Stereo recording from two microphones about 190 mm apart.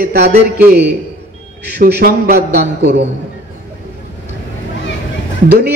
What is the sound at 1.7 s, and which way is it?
A man's voice, 60° right (ahead or behind).